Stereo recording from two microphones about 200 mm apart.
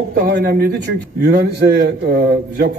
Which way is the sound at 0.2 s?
55° right (ahead or behind).